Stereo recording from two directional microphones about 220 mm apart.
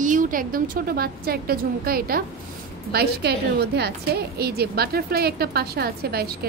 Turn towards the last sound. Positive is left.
turn(degrees=-45)  # may be behind; listen again after turning